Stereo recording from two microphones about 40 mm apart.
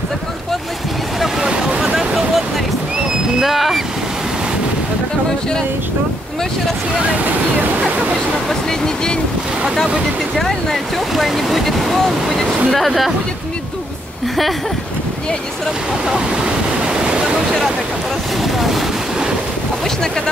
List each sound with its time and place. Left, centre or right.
1.4 s a sound: right
2.0 s a sound: centre
3.3 s speech: centre
8.5 s speech: centre
10.3 s speech: centre
16.8 s waterfall: right
18.4 s speech: centre